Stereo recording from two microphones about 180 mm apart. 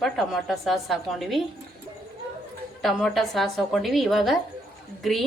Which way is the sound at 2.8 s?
Centre (ahead or behind).